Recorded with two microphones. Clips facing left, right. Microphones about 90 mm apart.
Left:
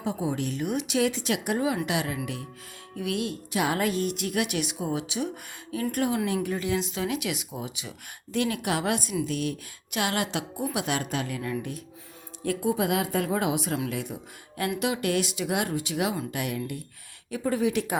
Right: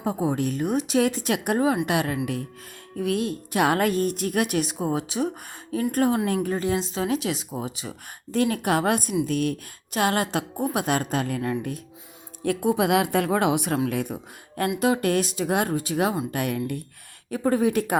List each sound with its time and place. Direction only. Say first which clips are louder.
0.0 s a woman's voice: right 4 dB; 45° right (ahead or behind)
3.0 s a woman's voice: right 5 dB; 40° right (ahead or behind)
12.4 s a woman's voice: right 4 dB; 60° right (ahead or behind)
13.9 s a woman's voice: right 5 dB; 50° right (ahead or behind)
17.3 s a woman's voice: right 4 dB; 45° right (ahead or behind)